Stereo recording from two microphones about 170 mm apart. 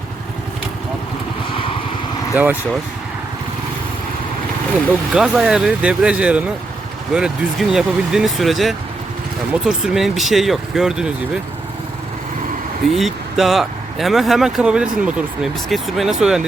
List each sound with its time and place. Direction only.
2.3 s speech: 10° right (ahead or behind)
5.1 s speech: 5° right (ahead or behind)
12.9 s speech: centre (ahead or behind)